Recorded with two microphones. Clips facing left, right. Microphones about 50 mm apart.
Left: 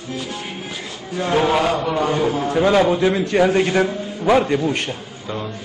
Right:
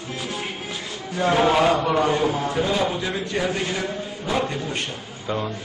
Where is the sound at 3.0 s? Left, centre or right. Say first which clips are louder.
Left 9 dB; left.